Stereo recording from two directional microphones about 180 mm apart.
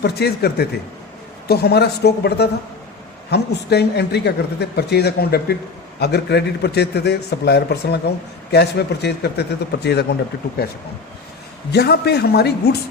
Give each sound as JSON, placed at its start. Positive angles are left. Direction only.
{"t": 0.0, "sound": "a man's voice", "side_deg": 65}
{"t": 11.7, "sound": "a man's voice", "side_deg": 65}